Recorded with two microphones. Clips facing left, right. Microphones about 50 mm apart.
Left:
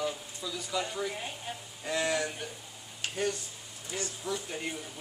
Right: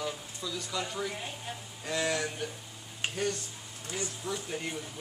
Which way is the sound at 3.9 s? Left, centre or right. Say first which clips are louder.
Left 1 dB; centre.